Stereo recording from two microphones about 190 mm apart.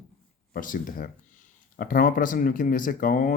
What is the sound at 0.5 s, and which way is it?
Speech, 45° left (ahead or behind).